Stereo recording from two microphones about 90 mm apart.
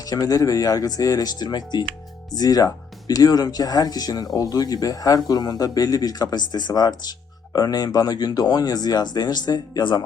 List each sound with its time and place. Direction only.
0.0 s speech: 45° left (ahead or behind)